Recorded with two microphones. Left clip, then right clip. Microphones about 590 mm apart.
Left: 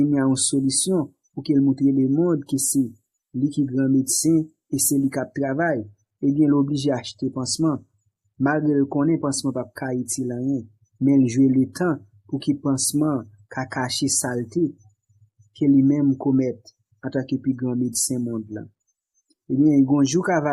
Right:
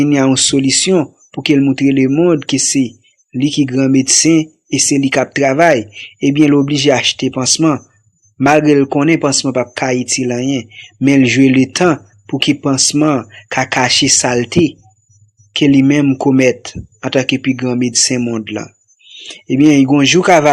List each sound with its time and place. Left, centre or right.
0.0 s speech: left
15.5 s speech: left